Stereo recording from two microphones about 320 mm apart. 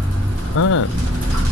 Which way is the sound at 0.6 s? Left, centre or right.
Left.